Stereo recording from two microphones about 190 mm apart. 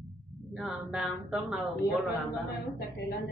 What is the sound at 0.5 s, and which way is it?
A man's voice, 5° right (ahead or behind).